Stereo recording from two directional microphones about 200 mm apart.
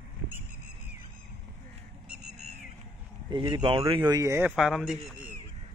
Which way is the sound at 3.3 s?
20° right (ahead or behind).